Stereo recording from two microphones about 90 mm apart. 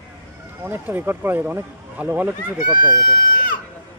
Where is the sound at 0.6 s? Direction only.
20° right (ahead or behind).